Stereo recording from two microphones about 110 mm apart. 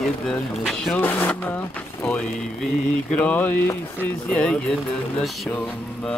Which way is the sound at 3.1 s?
15° left (ahead or behind).